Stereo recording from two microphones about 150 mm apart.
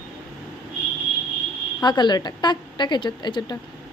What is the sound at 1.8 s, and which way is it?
A woman's voice, 30° left (ahead or behind).